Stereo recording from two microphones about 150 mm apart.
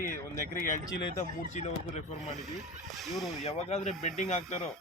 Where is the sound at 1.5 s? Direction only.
50° left (ahead or behind).